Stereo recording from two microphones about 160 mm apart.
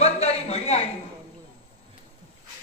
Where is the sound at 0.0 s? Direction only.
40° left (ahead or behind).